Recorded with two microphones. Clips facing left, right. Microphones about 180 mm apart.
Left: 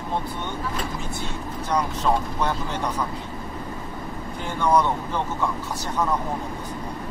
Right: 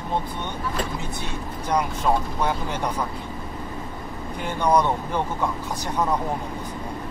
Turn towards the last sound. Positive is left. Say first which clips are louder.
# even
turn(degrees=-15)  # may be behind; listen again after turning